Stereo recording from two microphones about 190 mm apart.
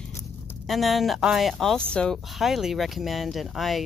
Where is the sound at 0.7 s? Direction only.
Centre (ahead or behind).